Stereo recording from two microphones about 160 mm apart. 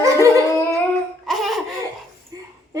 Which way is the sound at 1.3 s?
Centre (ahead or behind).